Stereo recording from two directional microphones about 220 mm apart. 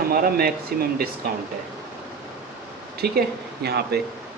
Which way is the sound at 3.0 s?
45° right (ahead or behind).